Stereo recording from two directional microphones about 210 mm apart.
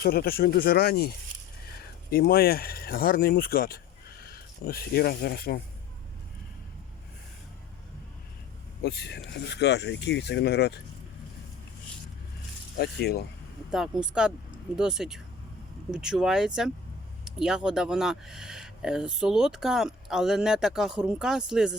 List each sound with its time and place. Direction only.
0.0 s speech: 45° left (ahead or behind)
8.8 s speech: 50° left (ahead or behind)
12.7 s speech: 50° left (ahead or behind)
13.7 s speech: centre (ahead or behind)